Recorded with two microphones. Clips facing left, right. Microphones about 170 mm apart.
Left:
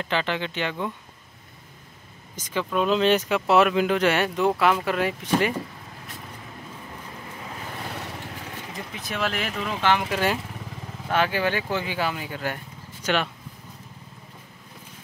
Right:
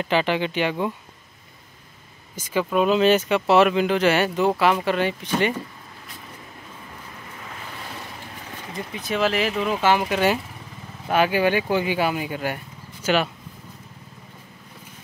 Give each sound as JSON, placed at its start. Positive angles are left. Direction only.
{"t": 0.0, "sound": "speech", "side_deg": -15}
{"t": 2.3, "sound": "speech", "side_deg": -10}
{"t": 8.7, "sound": "speech", "side_deg": 0}
{"t": 11.1, "sound": "speech", "side_deg": -15}